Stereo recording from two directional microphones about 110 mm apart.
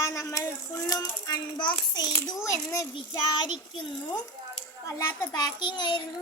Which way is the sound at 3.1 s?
40° left (ahead or behind).